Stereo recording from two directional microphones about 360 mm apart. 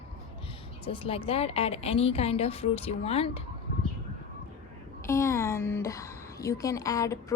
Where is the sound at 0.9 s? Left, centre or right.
Centre.